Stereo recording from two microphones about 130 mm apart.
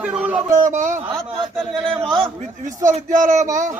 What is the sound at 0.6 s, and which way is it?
Speech, 75° right (ahead or behind).